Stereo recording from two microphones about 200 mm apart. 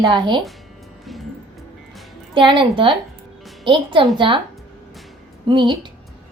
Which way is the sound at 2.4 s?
25° right (ahead or behind).